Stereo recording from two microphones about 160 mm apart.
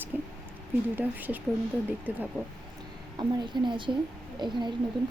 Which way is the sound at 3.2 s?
30° right (ahead or behind).